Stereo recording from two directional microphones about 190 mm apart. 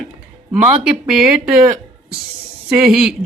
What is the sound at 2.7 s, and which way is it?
Speech, 5° right (ahead or behind).